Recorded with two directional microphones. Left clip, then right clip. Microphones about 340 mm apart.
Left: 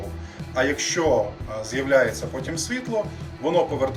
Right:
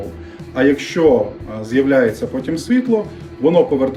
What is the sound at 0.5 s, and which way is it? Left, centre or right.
Speech, right.